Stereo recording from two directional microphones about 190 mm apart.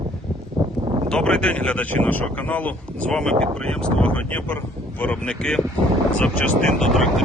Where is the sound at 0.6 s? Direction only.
20° right (ahead or behind).